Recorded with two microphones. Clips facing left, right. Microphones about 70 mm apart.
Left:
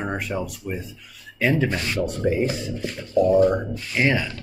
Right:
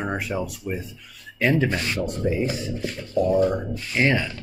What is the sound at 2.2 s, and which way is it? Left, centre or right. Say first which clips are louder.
Speech: left 2 dB; left.